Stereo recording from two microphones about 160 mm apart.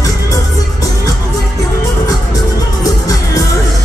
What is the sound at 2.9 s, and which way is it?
Music, 20° left (ahead or behind).